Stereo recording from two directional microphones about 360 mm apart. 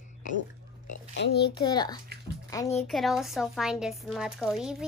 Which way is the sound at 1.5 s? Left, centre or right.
Centre.